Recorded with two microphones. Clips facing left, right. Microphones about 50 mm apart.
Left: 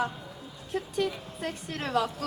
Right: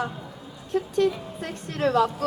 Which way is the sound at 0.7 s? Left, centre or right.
Centre.